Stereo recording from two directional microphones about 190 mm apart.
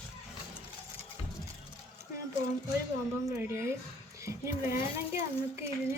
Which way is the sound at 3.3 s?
10° right (ahead or behind).